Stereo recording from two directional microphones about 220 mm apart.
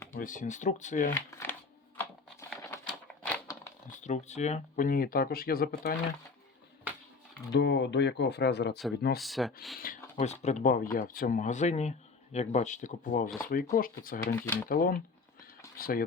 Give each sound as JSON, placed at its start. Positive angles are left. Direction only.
{"t": 0.2, "sound": "speech", "side_deg": 35}
{"t": 1.1, "sound": "speech", "side_deg": 10}
{"t": 2.0, "sound": "typewriter", "side_deg": 10}
{"t": 3.9, "sound": "speech", "side_deg": 35}
{"t": 7.5, "sound": "speech", "side_deg": 50}
{"t": 9.1, "sound": "speech", "side_deg": 0}
{"t": 9.7, "sound": "speech", "side_deg": 40}
{"t": 14.4, "sound": "speech", "side_deg": 10}
{"t": 14.7, "sound": "speech", "side_deg": 40}